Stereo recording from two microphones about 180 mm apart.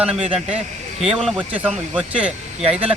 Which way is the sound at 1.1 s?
Centre (ahead or behind).